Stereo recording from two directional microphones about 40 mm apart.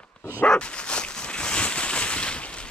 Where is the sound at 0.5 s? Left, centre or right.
Left.